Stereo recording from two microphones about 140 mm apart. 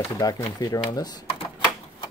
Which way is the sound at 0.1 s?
25° left (ahead or behind).